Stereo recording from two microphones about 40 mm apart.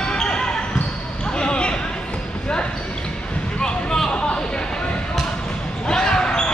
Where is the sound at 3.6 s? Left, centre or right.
Centre.